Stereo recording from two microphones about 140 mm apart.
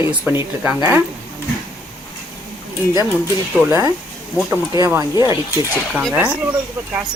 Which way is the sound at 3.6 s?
20° right (ahead or behind).